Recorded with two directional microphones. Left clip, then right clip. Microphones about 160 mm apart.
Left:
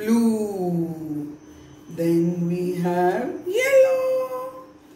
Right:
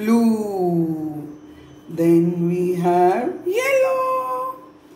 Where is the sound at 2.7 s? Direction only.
40° right (ahead or behind).